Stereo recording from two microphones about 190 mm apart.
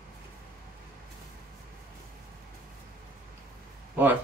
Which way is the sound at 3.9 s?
10° right (ahead or behind).